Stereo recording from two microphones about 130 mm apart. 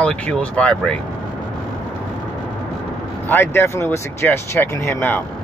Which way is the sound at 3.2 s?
15° left (ahead or behind).